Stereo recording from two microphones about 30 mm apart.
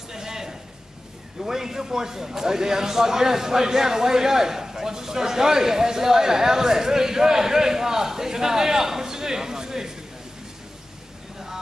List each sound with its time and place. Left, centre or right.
0.1 s a sound: centre
1.4 s a man's voice: centre
11.3 s vehicle: centre